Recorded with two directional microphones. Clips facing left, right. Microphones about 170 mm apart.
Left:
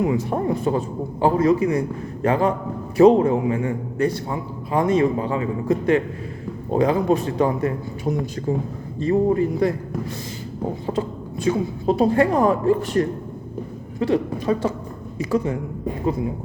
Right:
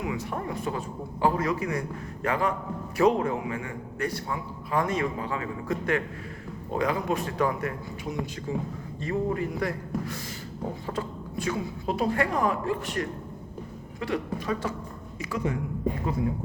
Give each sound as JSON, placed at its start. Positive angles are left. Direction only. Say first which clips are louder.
{"t": 0.0, "sound": "a man's voice", "louder": "left 10 dB", "side_deg": 30}
{"t": 8.0, "sound": "a man's voice", "louder": "left 9 dB", "side_deg": 40}